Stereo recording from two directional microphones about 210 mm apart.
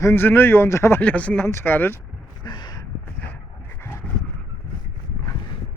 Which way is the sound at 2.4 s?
20° left (ahead or behind).